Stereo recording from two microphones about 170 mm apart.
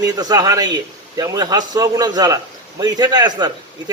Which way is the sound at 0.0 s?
20° right (ahead or behind).